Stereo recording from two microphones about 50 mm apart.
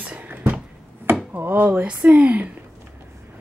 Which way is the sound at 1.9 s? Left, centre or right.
Right.